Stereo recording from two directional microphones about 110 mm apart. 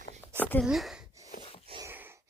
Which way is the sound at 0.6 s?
Centre (ahead or behind).